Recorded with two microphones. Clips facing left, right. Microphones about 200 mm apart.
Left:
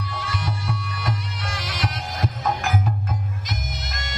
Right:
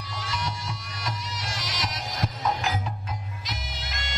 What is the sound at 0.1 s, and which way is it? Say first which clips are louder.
Music: right 1 dB; 55° left (ahead or behind).